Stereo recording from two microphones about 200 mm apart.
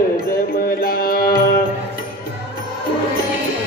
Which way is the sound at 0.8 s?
45° left (ahead or behind).